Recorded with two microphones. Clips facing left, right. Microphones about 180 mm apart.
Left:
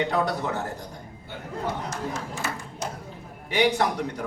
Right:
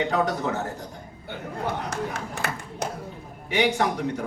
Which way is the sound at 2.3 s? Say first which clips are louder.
Right 1 dB; 60° right (ahead or behind).